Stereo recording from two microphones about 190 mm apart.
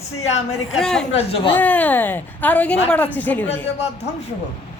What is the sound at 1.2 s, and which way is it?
Speech, 30° left (ahead or behind).